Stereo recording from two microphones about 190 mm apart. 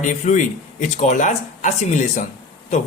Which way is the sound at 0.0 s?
40° left (ahead or behind).